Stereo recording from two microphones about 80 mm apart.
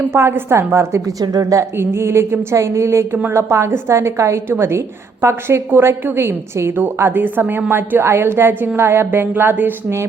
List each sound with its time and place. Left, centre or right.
0.1 s a woman's voice: right
1.2 s a woman's voice: right
1.8 s a woman's voice: right